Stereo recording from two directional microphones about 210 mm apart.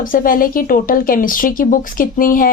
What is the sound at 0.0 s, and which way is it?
Speech, 40° left (ahead or behind).